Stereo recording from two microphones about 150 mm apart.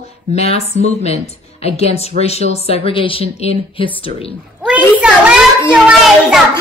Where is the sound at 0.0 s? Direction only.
45° left (ahead or behind).